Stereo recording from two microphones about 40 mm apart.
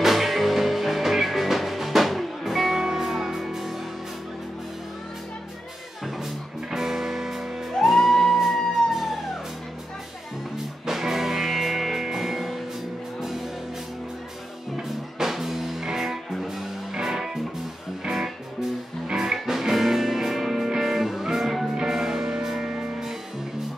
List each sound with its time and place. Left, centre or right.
0.0 s music: centre
6.0 s music: centre
7.7 s music: centre
8.5 s emergency vehicle: centre
10.9 s music: centre
14.8 s music: centre